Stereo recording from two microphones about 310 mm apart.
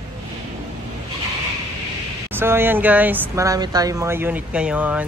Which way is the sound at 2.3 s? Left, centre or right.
Centre.